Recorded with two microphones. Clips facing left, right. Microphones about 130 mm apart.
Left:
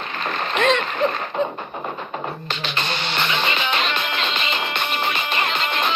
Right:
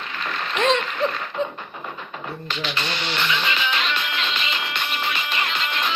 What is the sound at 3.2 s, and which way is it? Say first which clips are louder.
Music: left 2 dB; 45° left (ahead or behind).